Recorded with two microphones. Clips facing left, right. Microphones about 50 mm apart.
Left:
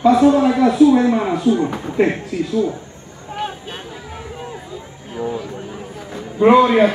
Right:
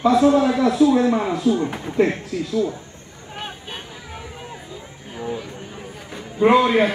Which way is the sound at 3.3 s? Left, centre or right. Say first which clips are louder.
Left 6 dB; centre.